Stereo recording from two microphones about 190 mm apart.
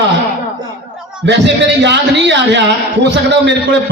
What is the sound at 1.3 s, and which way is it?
A man's voice, 65° right (ahead or behind).